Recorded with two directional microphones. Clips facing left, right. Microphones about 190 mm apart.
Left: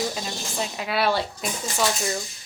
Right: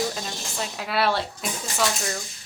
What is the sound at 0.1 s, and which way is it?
Speech, 5° left (ahead or behind).